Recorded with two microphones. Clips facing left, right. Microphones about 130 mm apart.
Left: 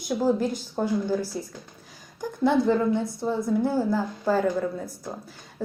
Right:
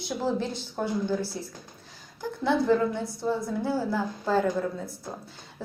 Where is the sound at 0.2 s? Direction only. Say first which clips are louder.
Left 5 dB; 10° left (ahead or behind).